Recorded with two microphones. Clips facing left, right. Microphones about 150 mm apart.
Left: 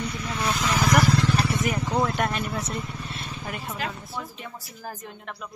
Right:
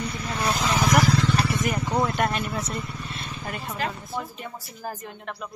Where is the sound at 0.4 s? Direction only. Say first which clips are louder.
Right 1 dB; 35° right (ahead or behind).